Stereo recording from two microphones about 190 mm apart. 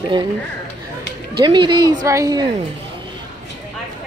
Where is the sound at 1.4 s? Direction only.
25° right (ahead or behind).